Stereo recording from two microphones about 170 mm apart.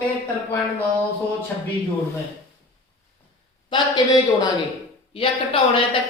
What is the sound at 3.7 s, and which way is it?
A man's voice, 25° left (ahead or behind).